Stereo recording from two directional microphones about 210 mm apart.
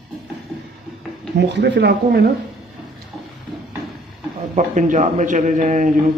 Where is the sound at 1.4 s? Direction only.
55° right (ahead or behind).